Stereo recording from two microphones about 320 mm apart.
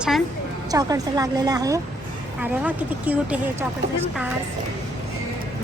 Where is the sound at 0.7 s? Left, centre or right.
Centre.